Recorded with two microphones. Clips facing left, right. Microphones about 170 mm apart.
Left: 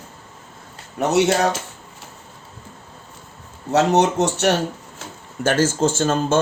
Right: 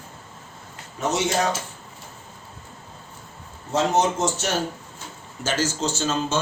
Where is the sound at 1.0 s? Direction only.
60° left (ahead or behind).